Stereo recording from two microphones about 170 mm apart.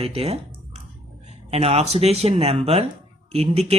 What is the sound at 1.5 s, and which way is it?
Speech, 35° right (ahead or behind).